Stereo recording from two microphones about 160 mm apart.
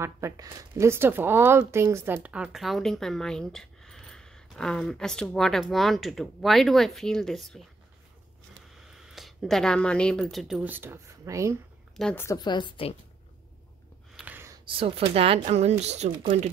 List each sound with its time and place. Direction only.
0.0 s speech: 20° right (ahead or behind); by 7.6 s centre (ahead or behind)
8.7 s speech: 5° right (ahead or behind); by 11.5 s 20° right (ahead or behind)
12.0 s a woman's voice: 5° left (ahead or behind)
12.3 s a woman's voice: 25° left (ahead or behind)
14.1 s gasp: 10° right (ahead or behind)
14.7 s speech: 35° right (ahead or behind)